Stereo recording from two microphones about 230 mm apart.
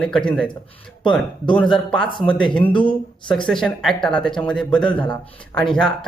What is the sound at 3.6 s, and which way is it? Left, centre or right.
Speech, centre.